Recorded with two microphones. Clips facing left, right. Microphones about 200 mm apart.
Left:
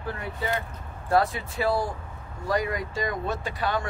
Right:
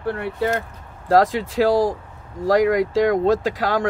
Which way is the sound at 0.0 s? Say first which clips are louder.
Right 9 dB; 70° right (ahead or behind).